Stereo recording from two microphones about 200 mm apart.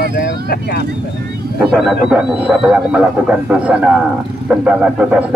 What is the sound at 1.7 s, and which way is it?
Speech, centre (ahead or behind).